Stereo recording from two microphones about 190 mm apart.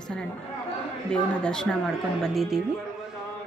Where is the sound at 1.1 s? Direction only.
5° left (ahead or behind).